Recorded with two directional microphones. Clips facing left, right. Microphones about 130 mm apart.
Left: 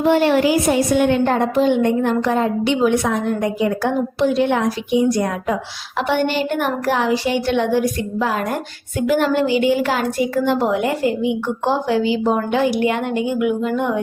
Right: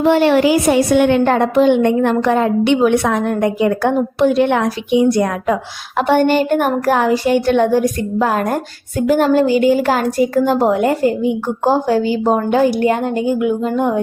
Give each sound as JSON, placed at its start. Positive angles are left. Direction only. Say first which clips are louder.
{"t": 0.0, "sound": "a woman's voice", "louder": "right 3 dB", "side_deg": -85}
{"t": 6.0, "sound": "speech", "louder": "right 6 dB", "side_deg": -45}